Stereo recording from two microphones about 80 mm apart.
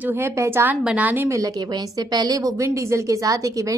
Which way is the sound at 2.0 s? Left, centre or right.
Right.